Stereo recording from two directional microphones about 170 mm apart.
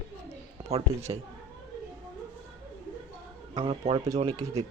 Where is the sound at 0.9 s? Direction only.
15° right (ahead or behind).